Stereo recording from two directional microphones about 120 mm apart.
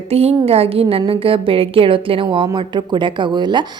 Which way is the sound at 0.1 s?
60° right (ahead or behind).